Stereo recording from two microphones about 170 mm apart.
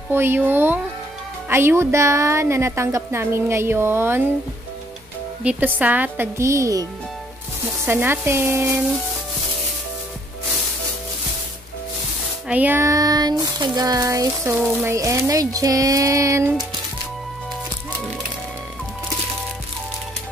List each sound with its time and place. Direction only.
0.1 s a woman's voice: 15° right (ahead or behind)
5.4 s a woman's voice: 10° right (ahead or behind)
7.8 s a woman's voice: 10° right (ahead or behind)
12.4 s a sound: 10° right (ahead or behind)
14.6 s speech: 5° right (ahead or behind)
14.9 s a sound: 15° right (ahead or behind)